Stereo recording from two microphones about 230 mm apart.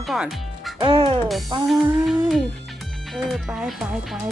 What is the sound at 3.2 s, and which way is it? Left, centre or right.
Speech, centre.